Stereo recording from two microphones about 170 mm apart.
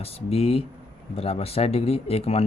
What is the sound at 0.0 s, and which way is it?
Speech, 35° left (ahead or behind).